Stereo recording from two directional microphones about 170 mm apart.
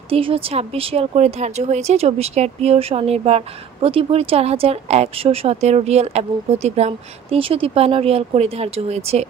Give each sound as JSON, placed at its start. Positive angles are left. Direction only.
{"t": 0.1, "sound": "speech", "side_deg": -35}